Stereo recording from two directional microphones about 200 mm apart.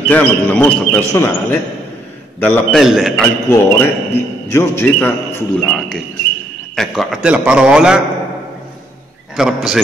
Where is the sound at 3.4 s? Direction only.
10° left (ahead or behind); by 8.0 s 5° right (ahead or behind).